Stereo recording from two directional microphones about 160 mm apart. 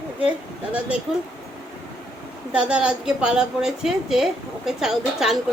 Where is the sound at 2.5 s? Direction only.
5° right (ahead or behind).